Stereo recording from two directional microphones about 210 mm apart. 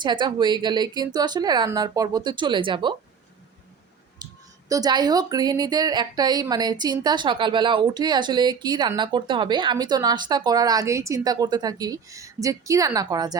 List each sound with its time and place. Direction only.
0.0 s a woman's voice: 20° right (ahead or behind)
4.2 s a sound: 20° right (ahead or behind)
4.7 s a woman's voice: 20° right (ahead or behind)